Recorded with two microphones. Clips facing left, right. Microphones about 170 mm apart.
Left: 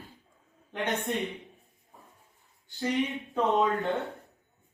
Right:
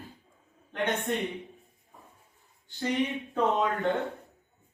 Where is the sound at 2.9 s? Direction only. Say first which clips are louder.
Right 1 dB; centre (ahead or behind).